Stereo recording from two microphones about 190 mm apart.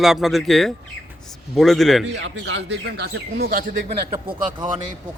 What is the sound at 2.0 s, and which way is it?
Speech, 80° right.